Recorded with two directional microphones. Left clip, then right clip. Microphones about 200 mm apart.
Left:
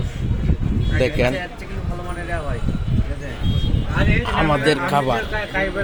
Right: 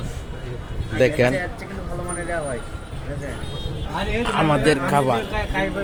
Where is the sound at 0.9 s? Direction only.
5° right (ahead or behind).